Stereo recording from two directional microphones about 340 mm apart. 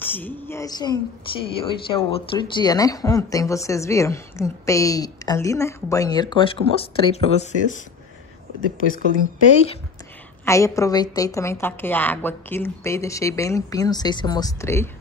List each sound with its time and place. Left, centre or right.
0.0 s speech: centre
8.8 s speech: left
10.4 s speech: centre